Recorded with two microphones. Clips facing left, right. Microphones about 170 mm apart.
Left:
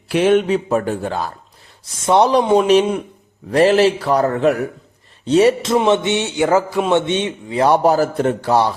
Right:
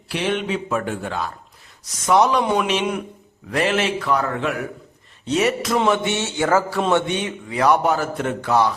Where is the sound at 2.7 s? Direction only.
40° left (ahead or behind).